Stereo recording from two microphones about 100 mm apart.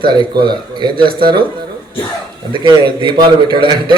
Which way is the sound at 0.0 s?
50° right (ahead or behind).